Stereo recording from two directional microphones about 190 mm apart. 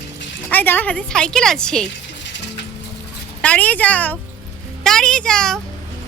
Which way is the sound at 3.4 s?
5° left (ahead or behind).